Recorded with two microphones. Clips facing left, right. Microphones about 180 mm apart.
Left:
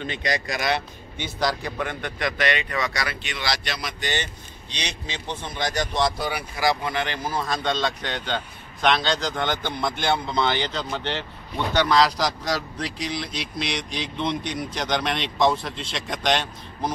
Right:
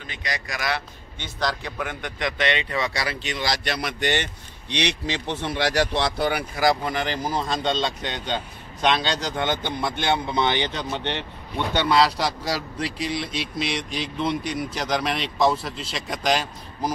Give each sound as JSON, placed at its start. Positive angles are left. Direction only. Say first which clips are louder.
{"t": 0.0, "sound": "a man's voice", "louder": "left 6 dB", "side_deg": 25}
{"t": 1.9, "sound": "speech", "louder": "left 1 dB", "side_deg": -15}
{"t": 6.8, "sound": "speech", "louder": "right 1 dB", "side_deg": -40}
{"t": 7.3, "sound": "a man's voice", "louder": "even", "side_deg": -25}
{"t": 12.0, "sound": "speech", "louder": "even", "side_deg": -5}